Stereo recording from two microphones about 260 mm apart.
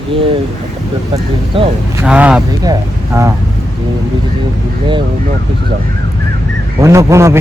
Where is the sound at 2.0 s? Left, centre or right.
Centre.